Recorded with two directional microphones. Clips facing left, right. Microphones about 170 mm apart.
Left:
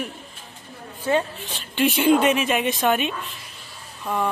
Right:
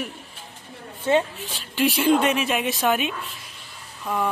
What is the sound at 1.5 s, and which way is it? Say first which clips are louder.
Speech: left 1 dB; centre (ahead or behind).